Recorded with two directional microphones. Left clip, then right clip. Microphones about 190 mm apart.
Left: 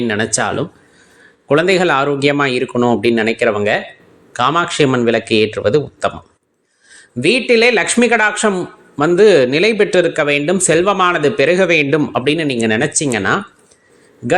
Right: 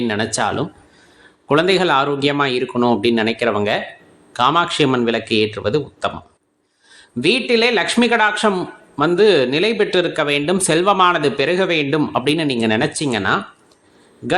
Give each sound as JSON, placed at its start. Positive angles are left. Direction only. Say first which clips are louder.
{"t": 0.0, "sound": "a man's voice", "louder": "left 2 dB", "side_deg": 10}